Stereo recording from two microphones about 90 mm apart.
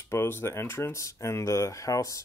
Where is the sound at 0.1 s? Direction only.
25° left (ahead or behind).